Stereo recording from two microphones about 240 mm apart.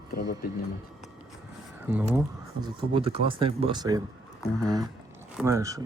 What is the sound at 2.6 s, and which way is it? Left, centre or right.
Speech, right.